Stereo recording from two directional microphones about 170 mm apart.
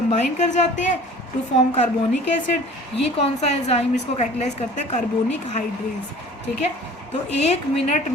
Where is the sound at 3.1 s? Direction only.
40° left (ahead or behind).